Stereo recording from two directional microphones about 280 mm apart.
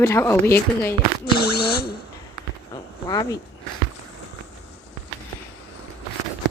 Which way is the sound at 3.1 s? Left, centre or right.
Centre.